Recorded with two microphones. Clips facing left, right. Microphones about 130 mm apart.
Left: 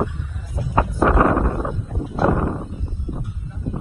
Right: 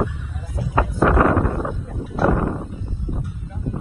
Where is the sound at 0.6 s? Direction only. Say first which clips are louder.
Even; 25° left (ahead or behind).